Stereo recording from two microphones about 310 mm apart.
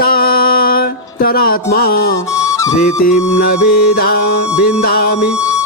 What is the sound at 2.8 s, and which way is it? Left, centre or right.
Music, left.